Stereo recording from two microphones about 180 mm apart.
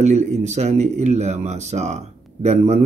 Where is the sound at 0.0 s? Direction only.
40° right (ahead or behind).